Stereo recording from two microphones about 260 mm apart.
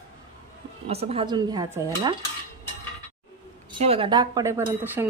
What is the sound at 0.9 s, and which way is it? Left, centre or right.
A woman's voice, right.